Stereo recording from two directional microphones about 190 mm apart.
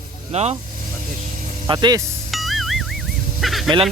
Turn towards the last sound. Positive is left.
turn(degrees=0)  # may be behind; listen again after turning